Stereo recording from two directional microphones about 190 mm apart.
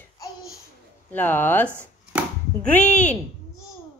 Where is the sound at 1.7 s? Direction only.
10° right (ahead or behind).